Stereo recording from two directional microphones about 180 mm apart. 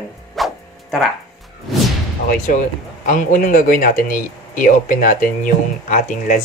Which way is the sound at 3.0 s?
50° left (ahead or behind).